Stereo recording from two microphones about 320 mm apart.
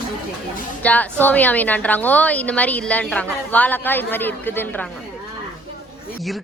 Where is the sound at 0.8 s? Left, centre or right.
Centre.